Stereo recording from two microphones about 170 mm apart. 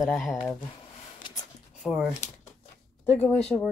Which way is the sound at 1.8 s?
Centre (ahead or behind).